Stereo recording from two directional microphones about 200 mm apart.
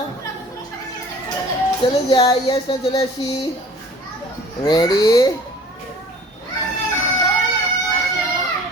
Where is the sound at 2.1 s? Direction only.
25° left (ahead or behind).